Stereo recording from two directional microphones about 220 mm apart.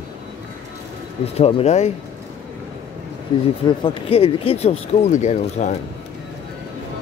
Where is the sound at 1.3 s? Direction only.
25° left (ahead or behind).